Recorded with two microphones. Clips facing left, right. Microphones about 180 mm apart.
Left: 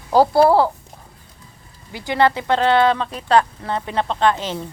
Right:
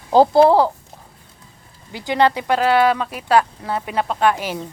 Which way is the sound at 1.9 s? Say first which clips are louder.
Even; 15° right (ahead or behind).